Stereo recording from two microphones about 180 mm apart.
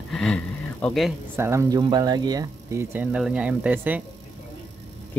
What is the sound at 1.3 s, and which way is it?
Speech, 15° right (ahead or behind).